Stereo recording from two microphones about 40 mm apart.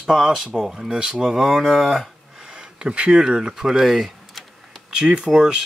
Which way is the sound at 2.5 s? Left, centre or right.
Right.